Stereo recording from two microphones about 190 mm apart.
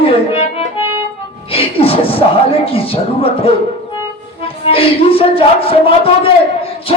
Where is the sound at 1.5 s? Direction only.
30° left (ahead or behind).